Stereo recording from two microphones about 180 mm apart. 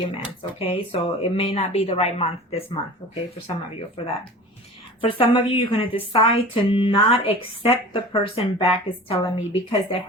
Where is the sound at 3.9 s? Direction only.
30° left (ahead or behind).